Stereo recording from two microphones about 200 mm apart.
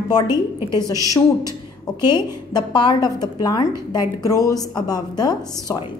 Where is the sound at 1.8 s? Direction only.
20° left (ahead or behind).